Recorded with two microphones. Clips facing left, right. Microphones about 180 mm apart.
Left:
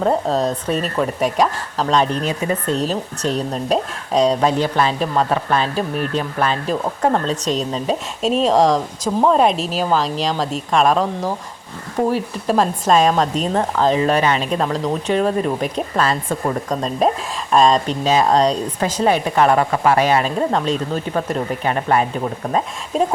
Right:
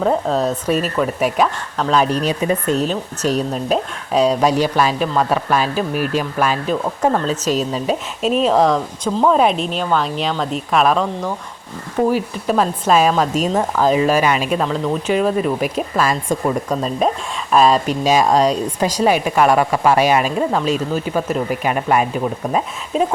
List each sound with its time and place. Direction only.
0.0 s speech: centre (ahead or behind)
2.2 s speech: 20° right (ahead or behind)
2.7 s speech: centre (ahead or behind)
22.9 s speech: centre (ahead or behind)